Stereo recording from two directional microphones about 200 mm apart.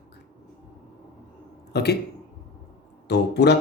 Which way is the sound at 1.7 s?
55° left (ahead or behind).